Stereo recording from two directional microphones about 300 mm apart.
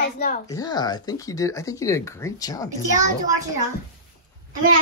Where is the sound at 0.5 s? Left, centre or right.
Centre.